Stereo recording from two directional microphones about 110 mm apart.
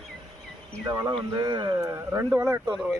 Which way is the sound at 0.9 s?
40° right (ahead or behind).